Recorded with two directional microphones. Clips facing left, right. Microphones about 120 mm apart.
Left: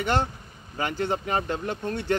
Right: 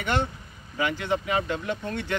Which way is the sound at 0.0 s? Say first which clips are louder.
Left 2 dB; 35° left (ahead or behind).